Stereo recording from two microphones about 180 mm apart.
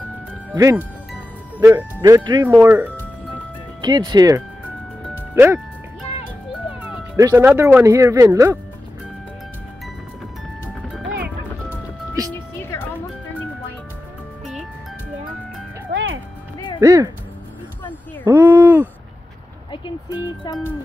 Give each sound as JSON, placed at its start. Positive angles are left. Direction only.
{"t": 0.6, "sound": "speech", "side_deg": -15}
{"t": 3.8, "sound": "speech", "side_deg": -25}
{"t": 7.2, "sound": "speech", "side_deg": -15}
{"t": 12.5, "sound": "music", "side_deg": 15}
{"t": 14.4, "sound": "music", "side_deg": 0}
{"t": 15.9, "sound": "music", "side_deg": -90}
{"t": 16.5, "sound": "music", "side_deg": 25}
{"t": 16.8, "sound": "speech", "side_deg": -15}
{"t": 18.2, "sound": "a sound", "side_deg": -15}
{"t": 19.7, "sound": "a sound", "side_deg": 25}